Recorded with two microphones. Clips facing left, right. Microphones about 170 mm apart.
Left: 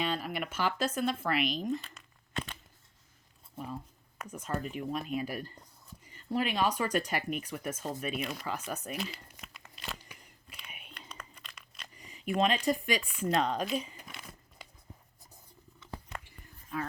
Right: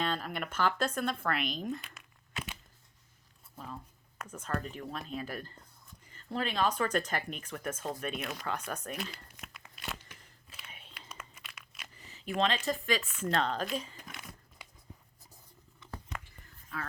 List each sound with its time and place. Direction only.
0.0 s speech: 5° left (ahead or behind)
1.8 s a sound: 5° right (ahead or behind)
4.3 s speech: 10° left (ahead or behind)
10.9 s a sound: 5° right (ahead or behind)
12.4 s speech: 15° left (ahead or behind); by 14.3 s centre (ahead or behind)
16.7 s speech: 20° left (ahead or behind)